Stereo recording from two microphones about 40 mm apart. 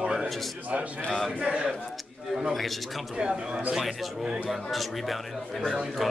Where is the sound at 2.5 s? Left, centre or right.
Centre.